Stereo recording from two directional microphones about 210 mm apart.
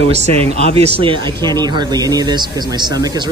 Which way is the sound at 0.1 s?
30° right (ahead or behind).